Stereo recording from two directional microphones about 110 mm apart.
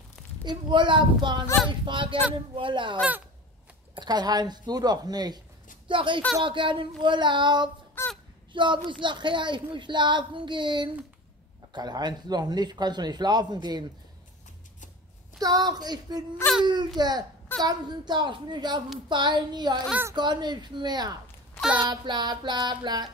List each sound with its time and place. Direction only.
0.5 s a woman's voice: 45° right (ahead or behind)
5.9 s a woman's voice: 50° right (ahead or behind)
8.0 s a sound: 20° left (ahead or behind)
8.5 s a woman's voice: 45° right (ahead or behind)
15.3 s a man's voice: 35° right (ahead or behind)